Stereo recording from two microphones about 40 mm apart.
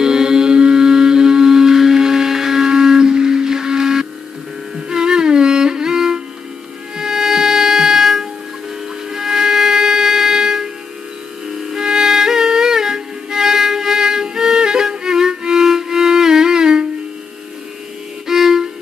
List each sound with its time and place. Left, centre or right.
0.0 s music: centre
11.7 s music: centre
18.2 s violin: centre